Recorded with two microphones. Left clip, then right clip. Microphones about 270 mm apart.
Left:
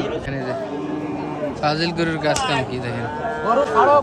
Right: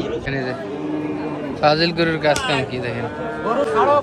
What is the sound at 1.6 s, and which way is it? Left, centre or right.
Speech, centre.